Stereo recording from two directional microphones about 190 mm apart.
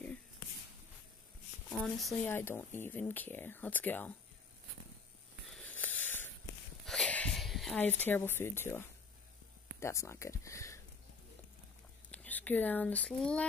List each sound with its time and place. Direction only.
1.7 s speech: centre (ahead or behind)
5.5 s a sound: 5° left (ahead or behind)
9.8 s speech: 15° left (ahead or behind)
12.1 s speech: 10° left (ahead or behind)